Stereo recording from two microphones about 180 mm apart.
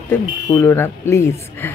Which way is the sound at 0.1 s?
15° left (ahead or behind).